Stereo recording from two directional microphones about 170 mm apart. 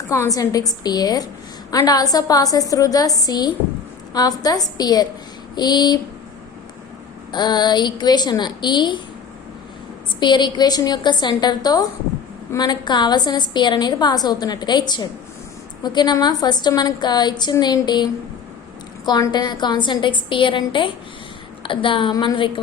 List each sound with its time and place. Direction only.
0.1 s a woman's voice: 20° left (ahead or behind)
7.3 s a woman's voice: 25° left (ahead or behind)
10.2 s a woman's voice: 25° left (ahead or behind)